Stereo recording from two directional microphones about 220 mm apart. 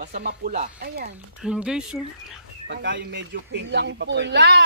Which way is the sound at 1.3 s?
5° right (ahead or behind).